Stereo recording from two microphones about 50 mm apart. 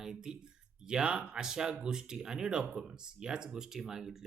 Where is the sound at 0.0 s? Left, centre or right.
Centre.